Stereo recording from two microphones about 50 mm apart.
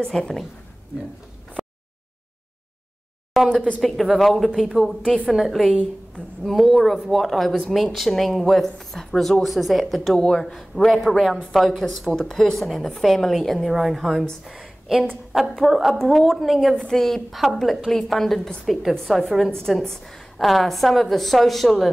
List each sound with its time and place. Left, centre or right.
0.0 s a woman's voice: centre
3.4 s speech: centre
5.0 s a woman's voice: centre
5.3 s speech: centre
10.1 s a woman's voice: centre
14.4 s a sound: centre
15.6 s speech: centre
16.7 s speech: centre